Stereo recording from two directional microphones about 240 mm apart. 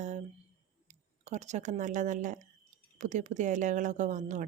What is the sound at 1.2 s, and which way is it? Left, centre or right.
Speech, right.